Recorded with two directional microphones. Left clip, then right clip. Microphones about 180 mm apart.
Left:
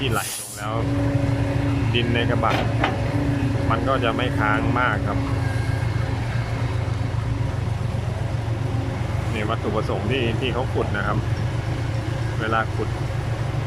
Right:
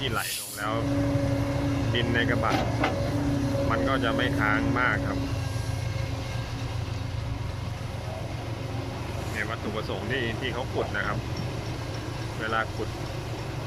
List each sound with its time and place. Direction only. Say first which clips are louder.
1.9 s speech: left 3 dB; 5° left (ahead or behind)
10.1 s speech: left 5 dB; 5° left (ahead or behind)
12.4 s speech: left 5 dB; 5° left (ahead or behind)